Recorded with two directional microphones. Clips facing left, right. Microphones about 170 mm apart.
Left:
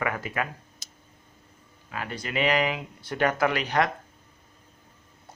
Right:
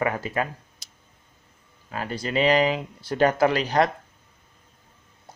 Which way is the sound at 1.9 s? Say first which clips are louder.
Right 4 dB; 35° right (ahead or behind).